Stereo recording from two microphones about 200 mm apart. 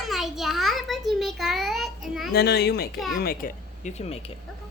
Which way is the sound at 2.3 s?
55° left (ahead or behind).